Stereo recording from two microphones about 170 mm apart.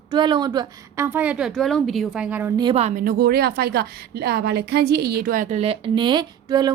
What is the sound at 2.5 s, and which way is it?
Speech, 25° right (ahead or behind).